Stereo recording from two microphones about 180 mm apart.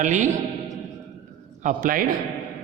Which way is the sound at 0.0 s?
45° right (ahead or behind).